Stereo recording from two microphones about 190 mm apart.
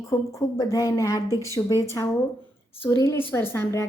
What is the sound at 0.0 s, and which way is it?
A woman's voice, 15° left (ahead or behind).